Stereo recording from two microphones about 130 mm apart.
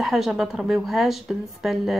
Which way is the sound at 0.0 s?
Centre (ahead or behind).